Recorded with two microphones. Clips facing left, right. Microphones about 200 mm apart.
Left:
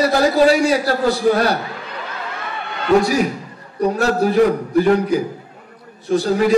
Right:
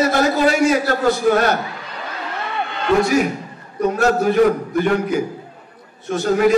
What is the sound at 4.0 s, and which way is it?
A man's voice, 35° left (ahead or behind).